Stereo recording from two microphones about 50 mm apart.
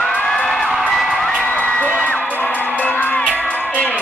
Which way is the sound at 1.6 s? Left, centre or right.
Left.